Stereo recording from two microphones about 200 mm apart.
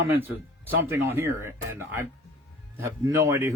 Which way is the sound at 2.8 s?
15° right (ahead or behind).